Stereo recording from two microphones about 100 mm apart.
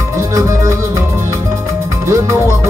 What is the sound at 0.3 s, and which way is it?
Music, 35° right (ahead or behind).